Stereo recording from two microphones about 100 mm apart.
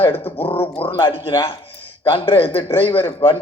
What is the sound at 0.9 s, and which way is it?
A man's voice, 55° left (ahead or behind).